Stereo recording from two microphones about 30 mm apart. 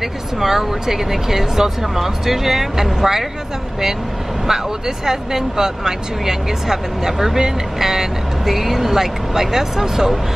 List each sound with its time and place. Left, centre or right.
0.0 s speech: centre
4.5 s speech: centre